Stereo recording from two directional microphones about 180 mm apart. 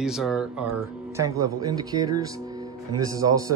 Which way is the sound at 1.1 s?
15° right (ahead or behind).